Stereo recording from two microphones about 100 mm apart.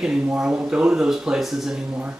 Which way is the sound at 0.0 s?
10° right (ahead or behind).